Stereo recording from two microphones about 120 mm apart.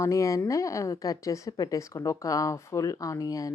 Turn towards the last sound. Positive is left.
turn(degrees=30)  # may be behind; listen again after turning